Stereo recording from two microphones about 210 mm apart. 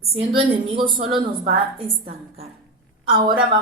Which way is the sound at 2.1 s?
30° right (ahead or behind).